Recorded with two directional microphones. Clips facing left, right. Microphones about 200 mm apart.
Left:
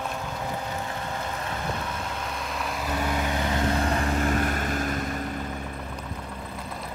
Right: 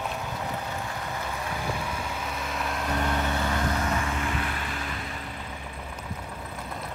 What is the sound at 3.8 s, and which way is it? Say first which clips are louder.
Vehicle: left 4 dB; 35° left (ahead or behind).